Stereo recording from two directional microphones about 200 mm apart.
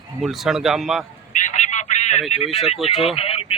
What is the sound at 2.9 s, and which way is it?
Speech, 30° left (ahead or behind).